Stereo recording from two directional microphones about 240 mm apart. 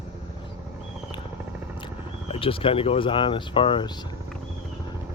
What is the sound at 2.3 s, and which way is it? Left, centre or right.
Speech, left.